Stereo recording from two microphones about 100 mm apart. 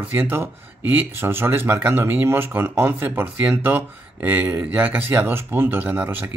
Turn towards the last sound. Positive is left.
turn(degrees=-20)  # may be behind; listen again after turning